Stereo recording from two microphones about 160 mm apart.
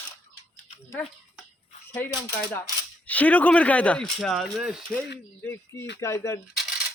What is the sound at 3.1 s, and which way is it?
Speech, 10° left (ahead or behind).